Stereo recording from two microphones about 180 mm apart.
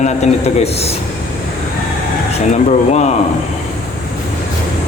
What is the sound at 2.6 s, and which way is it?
Speech, 40° left (ahead or behind).